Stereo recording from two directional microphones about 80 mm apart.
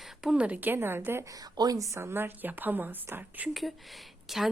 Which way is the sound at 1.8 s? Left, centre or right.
Right.